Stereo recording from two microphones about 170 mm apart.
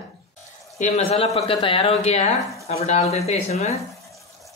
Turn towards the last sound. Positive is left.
turn(degrees=0)  # may be behind; listen again after turning